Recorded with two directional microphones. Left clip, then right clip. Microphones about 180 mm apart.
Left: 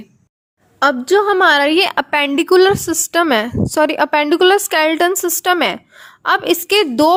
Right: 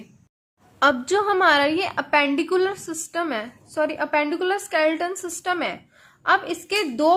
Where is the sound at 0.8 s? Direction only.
30° left (ahead or behind).